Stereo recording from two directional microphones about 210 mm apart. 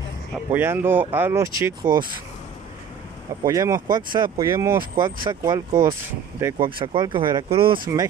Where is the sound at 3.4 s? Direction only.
15° right (ahead or behind).